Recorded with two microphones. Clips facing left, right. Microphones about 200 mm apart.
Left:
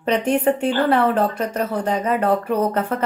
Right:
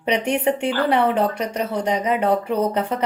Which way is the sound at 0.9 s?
10° right (ahead or behind).